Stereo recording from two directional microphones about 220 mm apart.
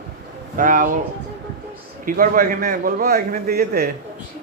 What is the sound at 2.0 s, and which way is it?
A man's voice, 40° right (ahead or behind).